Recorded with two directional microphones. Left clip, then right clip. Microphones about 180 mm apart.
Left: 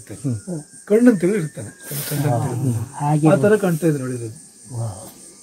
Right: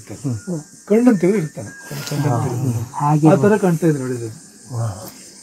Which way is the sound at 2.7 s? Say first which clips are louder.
Right 5 dB; centre (ahead or behind).